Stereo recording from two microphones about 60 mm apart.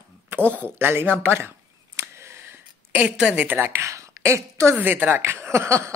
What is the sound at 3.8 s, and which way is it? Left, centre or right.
Speech, right.